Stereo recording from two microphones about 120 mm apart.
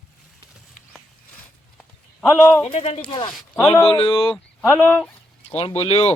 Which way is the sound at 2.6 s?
60° left (ahead or behind).